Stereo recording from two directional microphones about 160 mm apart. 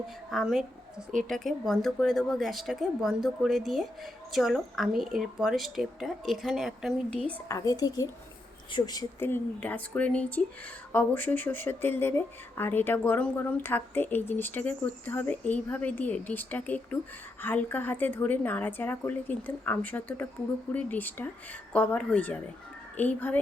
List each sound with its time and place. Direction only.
0.3 s a woman's voice: centre (ahead or behind)
7.4 s speech: 20° left (ahead or behind)